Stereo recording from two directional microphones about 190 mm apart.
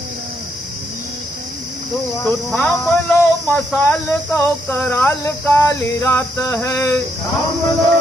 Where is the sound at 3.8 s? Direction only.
5° left (ahead or behind).